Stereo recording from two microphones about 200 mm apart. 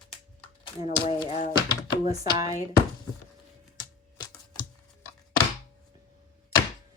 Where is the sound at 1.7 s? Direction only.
20° left (ahead or behind).